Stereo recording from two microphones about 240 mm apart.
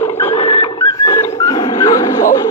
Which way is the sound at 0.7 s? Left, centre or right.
Centre.